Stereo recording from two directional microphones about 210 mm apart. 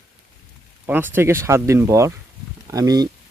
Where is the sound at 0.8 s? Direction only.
10° right (ahead or behind).